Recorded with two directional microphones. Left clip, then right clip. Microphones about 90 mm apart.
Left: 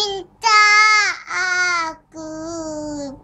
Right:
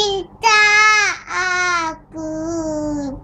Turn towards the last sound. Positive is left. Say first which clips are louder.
# right 5 dB
turn(degrees=35)  # may be behind; listen again after turning